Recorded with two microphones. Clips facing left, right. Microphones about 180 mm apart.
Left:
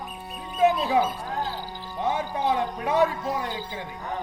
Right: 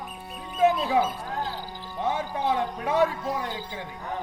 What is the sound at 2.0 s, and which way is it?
Speech, 15° left (ahead or behind).